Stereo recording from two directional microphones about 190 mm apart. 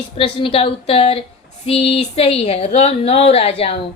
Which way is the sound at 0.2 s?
30° left (ahead or behind).